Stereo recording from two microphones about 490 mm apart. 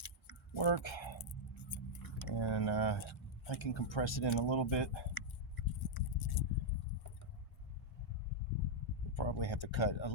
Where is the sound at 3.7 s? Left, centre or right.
Left.